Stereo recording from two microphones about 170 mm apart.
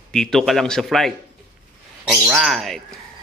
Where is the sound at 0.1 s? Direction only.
5° left (ahead or behind).